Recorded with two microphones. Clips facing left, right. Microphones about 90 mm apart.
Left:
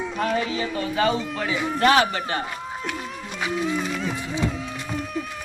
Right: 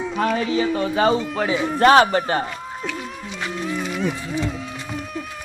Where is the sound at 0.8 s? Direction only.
30° right (ahead or behind).